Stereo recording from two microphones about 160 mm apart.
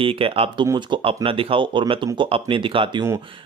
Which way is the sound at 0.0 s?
35° right (ahead or behind).